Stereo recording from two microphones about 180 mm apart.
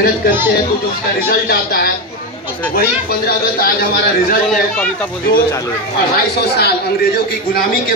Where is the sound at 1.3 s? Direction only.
60° left (ahead or behind).